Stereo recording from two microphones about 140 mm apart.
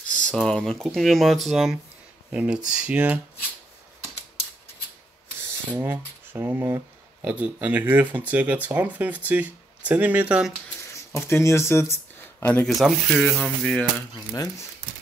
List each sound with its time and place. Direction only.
0.1 s speech: 5° left (ahead or behind); by 3.2 s 10° right (ahead or behind)
5.7 s speech: 15° right (ahead or behind)
11.1 s speech: 20° left (ahead or behind)
12.6 s speech: centre (ahead or behind)